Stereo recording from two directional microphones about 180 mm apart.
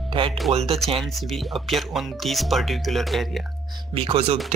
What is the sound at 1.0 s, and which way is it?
Speech, centre (ahead or behind).